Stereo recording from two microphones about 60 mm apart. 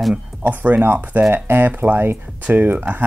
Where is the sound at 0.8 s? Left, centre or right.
Right.